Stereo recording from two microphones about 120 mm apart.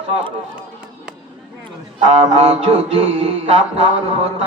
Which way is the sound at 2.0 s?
60° right (ahead or behind).